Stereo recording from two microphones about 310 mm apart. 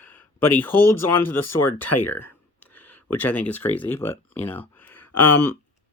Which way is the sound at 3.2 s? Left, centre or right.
Centre.